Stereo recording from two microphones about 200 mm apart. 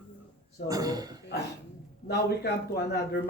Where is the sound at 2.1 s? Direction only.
55° left (ahead or behind).